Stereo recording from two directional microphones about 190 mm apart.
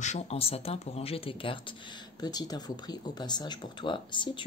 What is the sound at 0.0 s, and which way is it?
Speech, 35° left (ahead or behind).